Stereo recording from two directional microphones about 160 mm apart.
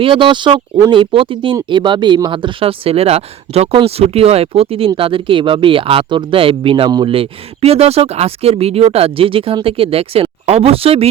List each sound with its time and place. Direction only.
0.0 s speech: 30° right (ahead or behind)